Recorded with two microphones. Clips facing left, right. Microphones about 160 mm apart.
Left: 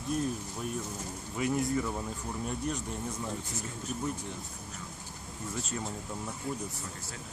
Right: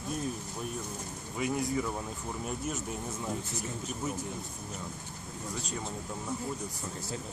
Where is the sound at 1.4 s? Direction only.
Centre (ahead or behind).